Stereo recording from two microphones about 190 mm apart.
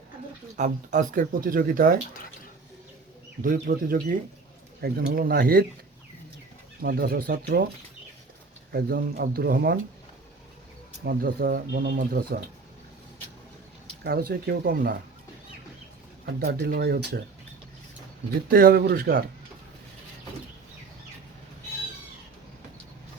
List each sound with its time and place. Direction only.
0.5 s speech: 40° right (ahead or behind)
3.4 s speech: 50° right (ahead or behind)
6.8 s speech: 55° right (ahead or behind)
8.7 s speech: 50° right (ahead or behind)
11.0 s speech: 50° right (ahead or behind)
14.0 s speech: 55° right (ahead or behind)
16.2 s speech: 55° right (ahead or behind)
18.4 s speech: 50° right (ahead or behind)